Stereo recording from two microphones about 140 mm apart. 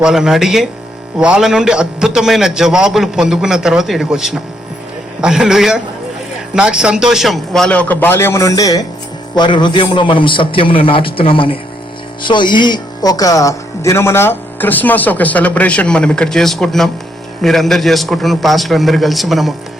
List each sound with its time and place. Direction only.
0.0 s a man's voice: 5° right (ahead or behind)